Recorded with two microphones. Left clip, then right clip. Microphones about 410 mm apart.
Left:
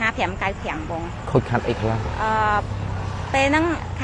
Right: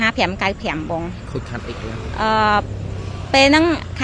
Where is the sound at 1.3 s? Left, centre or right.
Left.